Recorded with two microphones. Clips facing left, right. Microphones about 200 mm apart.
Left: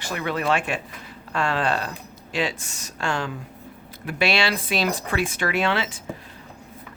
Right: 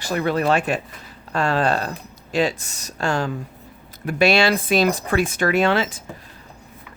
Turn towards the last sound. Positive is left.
turn(degrees=-45)  # may be behind; listen again after turning